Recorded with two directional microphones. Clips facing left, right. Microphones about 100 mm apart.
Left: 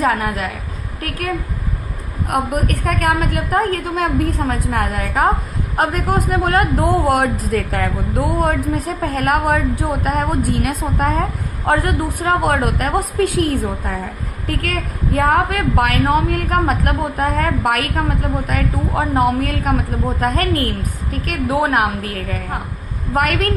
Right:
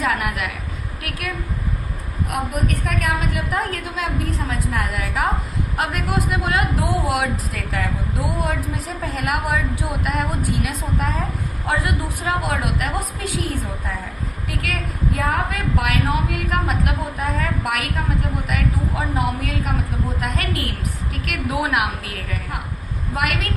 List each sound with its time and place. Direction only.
0.0 s a woman's voice: 35° left (ahead or behind)
2.3 s a woman's voice: 50° left (ahead or behind)
14.4 s a woman's voice: 45° left (ahead or behind)
15.2 s a woman's voice: 60° left (ahead or behind); by 23.5 s 45° left (ahead or behind)